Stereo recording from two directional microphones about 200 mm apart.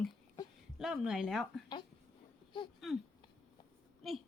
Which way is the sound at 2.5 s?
20° left (ahead or behind).